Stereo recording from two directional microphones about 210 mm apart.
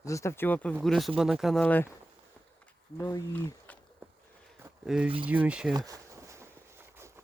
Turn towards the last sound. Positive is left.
turn(degrees=-15)  # may be behind; listen again after turning